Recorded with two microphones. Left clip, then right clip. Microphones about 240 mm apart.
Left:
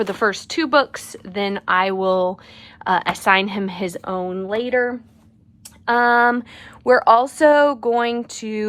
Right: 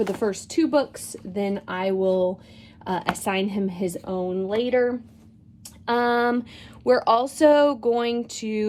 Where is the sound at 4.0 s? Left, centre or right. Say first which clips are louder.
Left 4 dB; left.